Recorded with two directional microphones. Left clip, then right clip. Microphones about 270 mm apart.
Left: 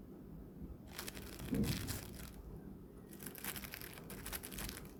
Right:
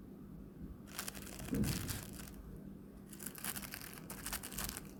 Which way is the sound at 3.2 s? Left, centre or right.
Centre.